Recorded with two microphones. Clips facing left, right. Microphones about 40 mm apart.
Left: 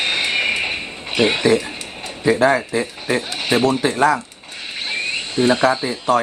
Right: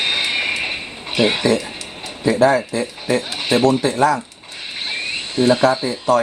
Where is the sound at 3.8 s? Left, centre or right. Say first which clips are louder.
Even; centre.